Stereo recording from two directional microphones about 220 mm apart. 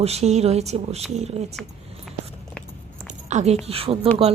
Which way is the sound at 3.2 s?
30° right (ahead or behind).